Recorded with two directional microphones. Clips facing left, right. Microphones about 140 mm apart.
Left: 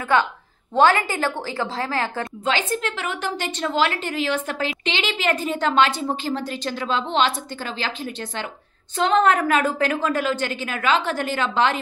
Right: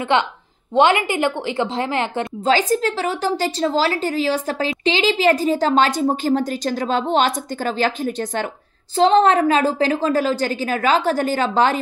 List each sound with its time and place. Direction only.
0.0 s a woman's voice: 20° right (ahead or behind)
2.4 s a woman's voice: 35° right (ahead or behind)
8.9 s a woman's voice: 30° right (ahead or behind)